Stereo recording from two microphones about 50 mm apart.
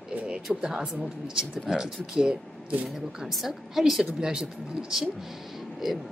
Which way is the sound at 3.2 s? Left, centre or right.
Centre.